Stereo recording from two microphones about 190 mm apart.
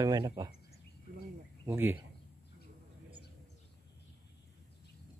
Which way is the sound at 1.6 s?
10° right (ahead or behind).